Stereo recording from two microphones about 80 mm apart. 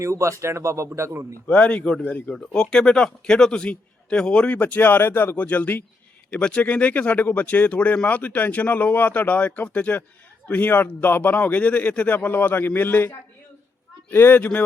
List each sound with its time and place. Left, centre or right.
0.0 s speech: right
1.5 s a man's voice: centre
2.3 s a man's voice: centre; by 13.1 s left
14.1 s speech: left